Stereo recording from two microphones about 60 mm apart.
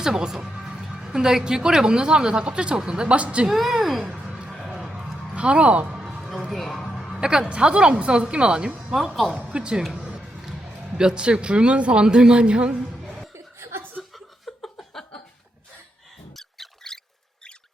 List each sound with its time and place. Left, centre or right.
0.0 s speech: centre
3.4 s a woman's voice: centre
4.2 s music: centre
4.6 s a sound: centre
5.3 s speech: centre
6.0 s music: centre
6.5 s a sound: centre
7.2 s speech: centre
9.9 s music: centre
10.2 s speech: centre
13.1 s chuckle: centre
13.3 s chuckle: right
14.1 s chuckle: centre
16.3 s squeak: centre